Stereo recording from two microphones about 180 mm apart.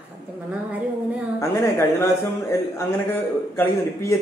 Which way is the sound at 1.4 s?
15° left (ahead or behind).